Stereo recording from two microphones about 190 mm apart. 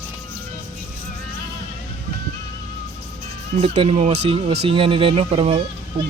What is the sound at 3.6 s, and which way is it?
Speech, 30° right (ahead or behind).